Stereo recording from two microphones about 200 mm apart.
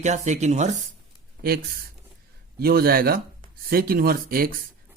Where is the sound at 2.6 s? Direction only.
50° right (ahead or behind).